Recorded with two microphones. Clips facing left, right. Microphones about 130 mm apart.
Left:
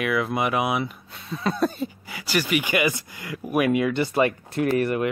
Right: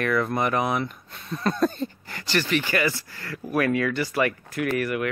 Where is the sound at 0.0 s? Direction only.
5° left (ahead or behind); by 5.1 s 30° left (ahead or behind).